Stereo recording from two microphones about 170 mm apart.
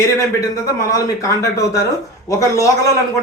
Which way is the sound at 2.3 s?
20° left (ahead or behind).